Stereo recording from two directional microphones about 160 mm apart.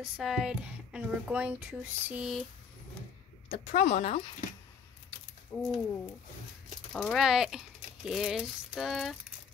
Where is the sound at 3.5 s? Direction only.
40° left (ahead or behind).